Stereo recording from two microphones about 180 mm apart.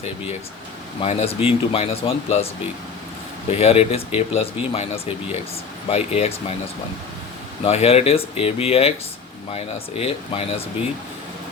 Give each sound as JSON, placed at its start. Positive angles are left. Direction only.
{"t": 1.0, "sound": "speech", "side_deg": 35}
{"t": 3.5, "sound": "speech", "side_deg": 35}
{"t": 7.6, "sound": "speech", "side_deg": 35}